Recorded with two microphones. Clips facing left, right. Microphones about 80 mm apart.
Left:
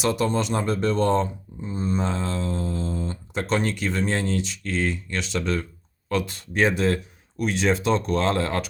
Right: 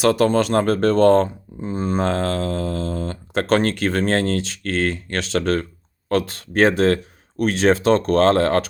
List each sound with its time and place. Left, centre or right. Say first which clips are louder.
0.0 s speech: right 7 dB; right
1.7 s speech: right 5 dB; right
3.3 s speech: right 6 dB; right